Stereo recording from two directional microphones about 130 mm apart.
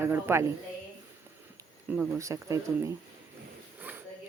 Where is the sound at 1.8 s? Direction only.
15° right (ahead or behind).